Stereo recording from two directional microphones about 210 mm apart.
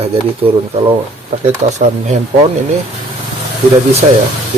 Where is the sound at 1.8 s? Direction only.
35° right (ahead or behind).